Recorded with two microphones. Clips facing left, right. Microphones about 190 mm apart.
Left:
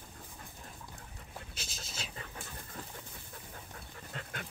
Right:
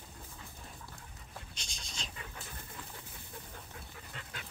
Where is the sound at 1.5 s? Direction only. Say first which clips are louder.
Left 3 dB; 5° left (ahead or behind).